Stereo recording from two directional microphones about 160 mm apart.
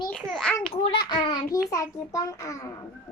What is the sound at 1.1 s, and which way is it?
A child's voice, 25° left (ahead or behind).